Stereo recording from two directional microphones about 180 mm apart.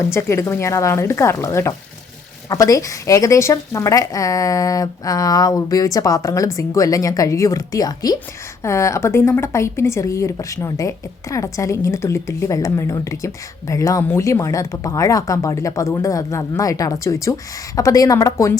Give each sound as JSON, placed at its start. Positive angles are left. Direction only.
{"t": 0.1, "sound": "a woman's voice", "side_deg": 15}